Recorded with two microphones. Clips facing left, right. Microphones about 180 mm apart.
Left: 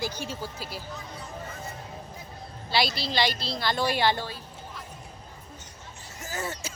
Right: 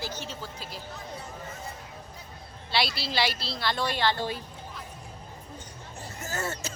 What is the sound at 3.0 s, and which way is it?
A woman's voice, 5° right (ahead or behind).